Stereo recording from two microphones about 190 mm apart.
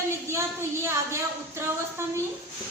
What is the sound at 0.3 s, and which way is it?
A woman's voice, 15° right (ahead or behind).